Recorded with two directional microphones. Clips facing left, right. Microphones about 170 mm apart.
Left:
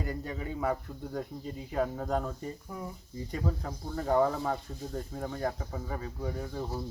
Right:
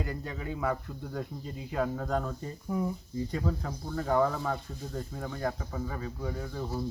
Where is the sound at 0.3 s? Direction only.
20° left (ahead or behind).